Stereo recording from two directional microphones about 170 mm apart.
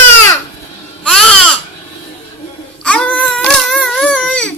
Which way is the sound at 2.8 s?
10° left (ahead or behind).